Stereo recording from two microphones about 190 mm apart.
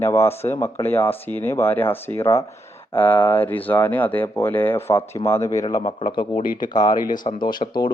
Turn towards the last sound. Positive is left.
turn(degrees=25)  # may be behind; listen again after turning